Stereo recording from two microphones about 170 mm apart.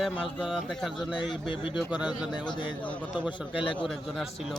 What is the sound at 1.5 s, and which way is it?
Speech, 30° left (ahead or behind).